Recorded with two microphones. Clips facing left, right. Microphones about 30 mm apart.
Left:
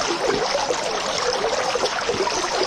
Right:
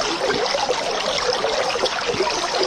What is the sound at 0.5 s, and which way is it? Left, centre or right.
Stream, centre.